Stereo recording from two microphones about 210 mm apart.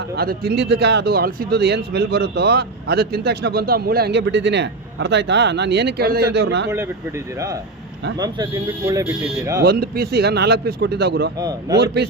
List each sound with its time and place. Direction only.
0.2 s speech: 45° right (ahead or behind)
8.2 s speech: 20° right (ahead or behind)
9.6 s speech: 50° right (ahead or behind)
11.3 s speech: 20° right (ahead or behind)